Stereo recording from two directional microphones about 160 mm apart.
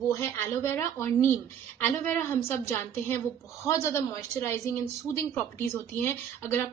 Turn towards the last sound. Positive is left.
turn(degrees=15)  # may be behind; listen again after turning